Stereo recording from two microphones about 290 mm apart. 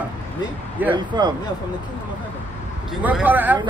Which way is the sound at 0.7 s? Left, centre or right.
Centre.